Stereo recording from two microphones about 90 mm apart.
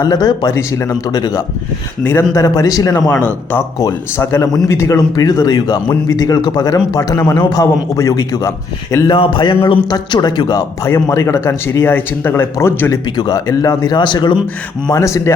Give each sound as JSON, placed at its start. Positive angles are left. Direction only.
{"t": 0.0, "sound": "a man's voice", "side_deg": 50}
{"t": 0.7, "sound": "a man's voice", "side_deg": 30}
{"t": 1.0, "sound": "a man's voice", "side_deg": 45}
{"t": 3.2, "sound": "speech", "side_deg": 20}
{"t": 4.2, "sound": "a man's voice", "side_deg": 35}
{"t": 9.0, "sound": "a man's voice", "side_deg": 65}
{"t": 10.8, "sound": "speech", "side_deg": 35}
{"t": 13.1, "sound": "a man's voice", "side_deg": 50}
{"t": 14.9, "sound": "a man's voice", "side_deg": 35}